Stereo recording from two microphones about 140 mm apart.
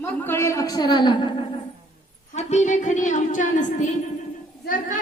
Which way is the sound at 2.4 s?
55° left (ahead or behind).